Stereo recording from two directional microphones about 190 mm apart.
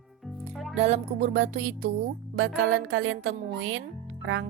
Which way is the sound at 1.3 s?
90° right.